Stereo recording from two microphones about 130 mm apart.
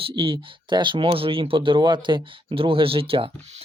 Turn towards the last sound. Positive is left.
turn(degrees=-45)  # may be behind; listen again after turning